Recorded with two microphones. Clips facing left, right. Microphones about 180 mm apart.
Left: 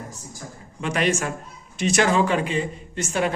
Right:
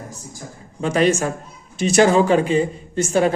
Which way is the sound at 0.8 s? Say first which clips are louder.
Right 6 dB; 35° right (ahead or behind).